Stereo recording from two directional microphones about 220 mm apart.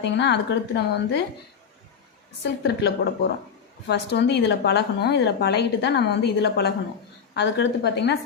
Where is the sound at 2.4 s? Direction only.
50° left (ahead or behind).